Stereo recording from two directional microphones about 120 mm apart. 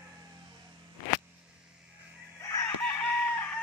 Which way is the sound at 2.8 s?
15° left (ahead or behind).